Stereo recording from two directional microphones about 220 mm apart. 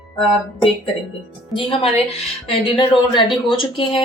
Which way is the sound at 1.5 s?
25° left (ahead or behind).